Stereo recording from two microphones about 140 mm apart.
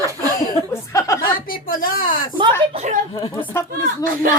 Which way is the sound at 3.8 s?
85° right.